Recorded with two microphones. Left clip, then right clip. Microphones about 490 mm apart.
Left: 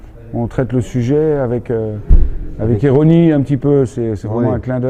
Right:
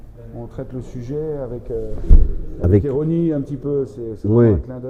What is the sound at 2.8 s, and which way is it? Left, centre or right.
Speech, left.